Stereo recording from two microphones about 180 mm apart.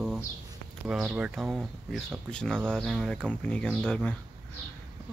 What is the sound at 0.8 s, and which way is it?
Speech, 5° right (ahead or behind).